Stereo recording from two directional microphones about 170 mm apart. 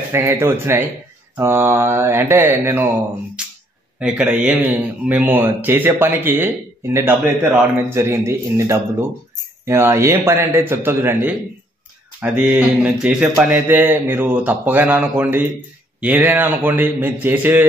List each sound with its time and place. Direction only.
0.1 s a man's voice: 15° right (ahead or behind)
3.4 s a sound: 5° right (ahead or behind)
4.0 s a man's voice: 5° right (ahead or behind)